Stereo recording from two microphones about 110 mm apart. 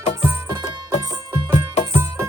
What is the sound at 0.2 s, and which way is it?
Music, 30° right (ahead or behind).